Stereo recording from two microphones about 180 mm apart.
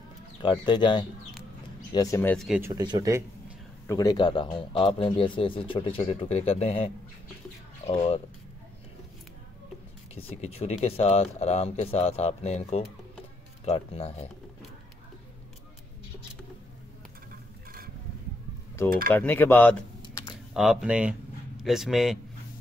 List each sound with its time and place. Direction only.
0.4 s speech: 25° left (ahead or behind)
2.3 s speech: centre (ahead or behind)
2.6 s speech: 20° right (ahead or behind)
3.8 s speech: 20° left (ahead or behind); by 8.2 s 40° left (ahead or behind)
10.1 s speech: 35° left (ahead or behind)
19.0 s speech: 10° left (ahead or behind)
20.0 s typing: 25° left (ahead or behind)
20.5 s a man's voice: centre (ahead or behind)